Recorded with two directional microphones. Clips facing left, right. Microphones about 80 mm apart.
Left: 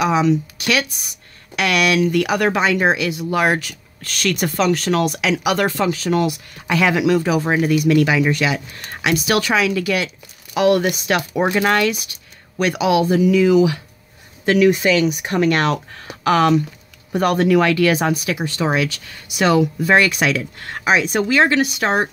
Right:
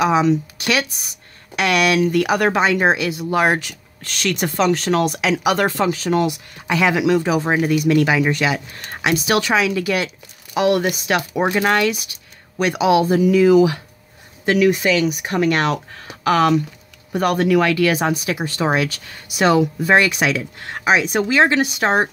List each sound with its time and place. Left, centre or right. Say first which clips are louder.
0.0 s speech: right 1 dB; right; by 12.7 s centre
12.7 s speech: right 1 dB; right
14.4 s speech: left 1 dB; centre
14.7 s speech: left 1 dB; centre
18.2 s speech: even; right
19.8 s speech: even; centre